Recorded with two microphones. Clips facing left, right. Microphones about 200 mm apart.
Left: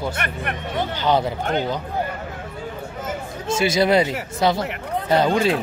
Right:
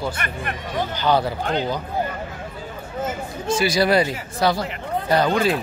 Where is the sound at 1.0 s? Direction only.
20° left (ahead or behind).